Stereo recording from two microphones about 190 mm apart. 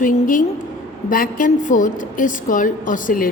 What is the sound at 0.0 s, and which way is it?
A woman's voice, 45° left (ahead or behind).